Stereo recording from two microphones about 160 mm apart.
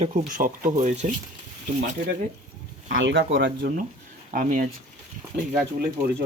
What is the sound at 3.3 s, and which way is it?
Speech, 80° right.